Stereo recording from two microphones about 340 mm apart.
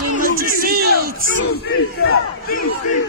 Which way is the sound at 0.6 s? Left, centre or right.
Right.